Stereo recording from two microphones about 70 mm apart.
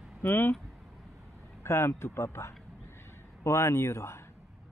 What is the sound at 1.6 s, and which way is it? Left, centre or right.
Speech, left.